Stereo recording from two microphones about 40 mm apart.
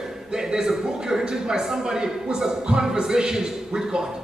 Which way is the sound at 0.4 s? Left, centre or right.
Centre.